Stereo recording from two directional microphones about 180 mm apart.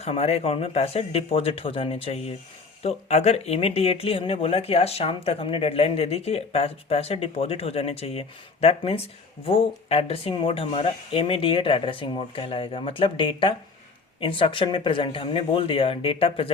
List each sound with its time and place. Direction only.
0.0 s speech: 35° left (ahead or behind)